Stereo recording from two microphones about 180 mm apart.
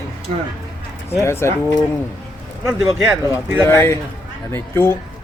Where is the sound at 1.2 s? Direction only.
15° left (ahead or behind).